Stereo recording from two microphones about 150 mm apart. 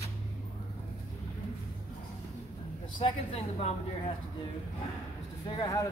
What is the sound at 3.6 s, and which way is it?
Speech, 45° left (ahead or behind).